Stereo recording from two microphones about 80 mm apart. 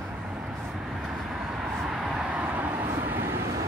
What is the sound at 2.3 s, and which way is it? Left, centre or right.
Vehicle, centre.